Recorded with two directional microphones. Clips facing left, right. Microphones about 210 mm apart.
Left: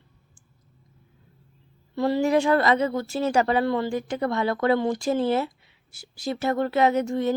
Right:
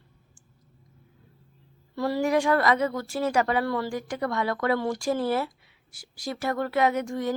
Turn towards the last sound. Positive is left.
turn(degrees=25)  # may be behind; listen again after turning